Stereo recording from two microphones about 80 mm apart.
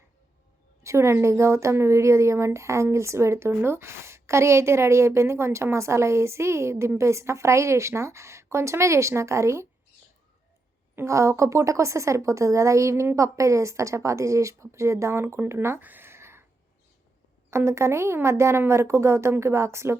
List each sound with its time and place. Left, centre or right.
0.8 s a woman's voice: right
10.9 s a woman's voice: right
15.8 s a sound: right
17.5 s a woman's voice: right